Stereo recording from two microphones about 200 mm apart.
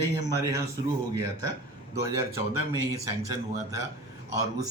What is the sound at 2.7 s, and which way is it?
Speech, 15° right (ahead or behind).